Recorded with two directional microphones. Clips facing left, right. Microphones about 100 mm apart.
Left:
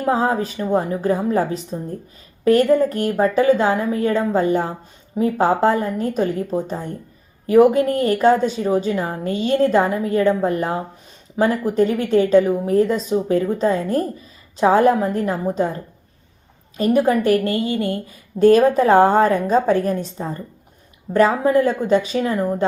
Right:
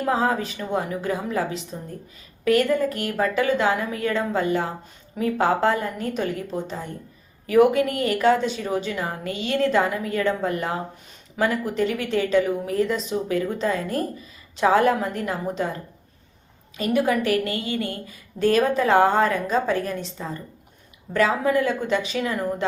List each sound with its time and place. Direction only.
0.1 s a woman's voice: 30° left (ahead or behind)
6.7 s speech: 45° left (ahead or behind)
7.4 s a woman's voice: 35° left (ahead or behind)
11.7 s a woman's voice: 40° left (ahead or behind)
16.7 s a woman's voice: 40° left (ahead or behind)